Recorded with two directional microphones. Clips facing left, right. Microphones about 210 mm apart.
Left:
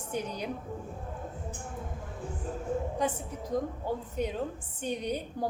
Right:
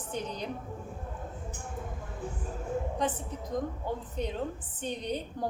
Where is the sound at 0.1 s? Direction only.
10° left (ahead or behind).